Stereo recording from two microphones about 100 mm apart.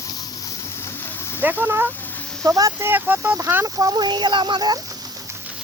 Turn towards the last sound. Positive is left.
turn(degrees=-45)  # may be behind; listen again after turning